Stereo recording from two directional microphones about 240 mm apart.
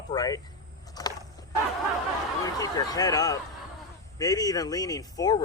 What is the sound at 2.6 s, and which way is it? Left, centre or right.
Speech, centre.